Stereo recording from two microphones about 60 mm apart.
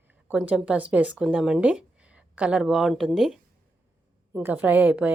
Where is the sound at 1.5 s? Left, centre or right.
Right.